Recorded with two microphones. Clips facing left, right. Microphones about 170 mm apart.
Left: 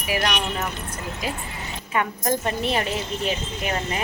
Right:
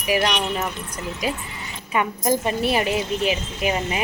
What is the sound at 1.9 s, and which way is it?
Speech, 10° right (ahead or behind).